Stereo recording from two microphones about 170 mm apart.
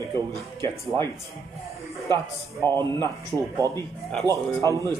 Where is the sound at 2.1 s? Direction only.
25° right (ahead or behind).